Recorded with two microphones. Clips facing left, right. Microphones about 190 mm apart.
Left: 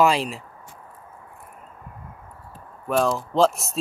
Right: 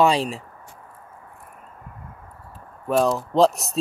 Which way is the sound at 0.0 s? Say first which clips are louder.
Right 1 dB; 35° right (ahead or behind).